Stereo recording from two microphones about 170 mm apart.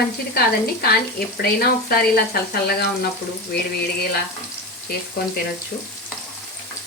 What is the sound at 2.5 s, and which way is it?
Speech, 65° left (ahead or behind).